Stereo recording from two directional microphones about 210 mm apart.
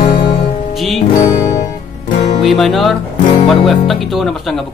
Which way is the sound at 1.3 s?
20° left (ahead or behind).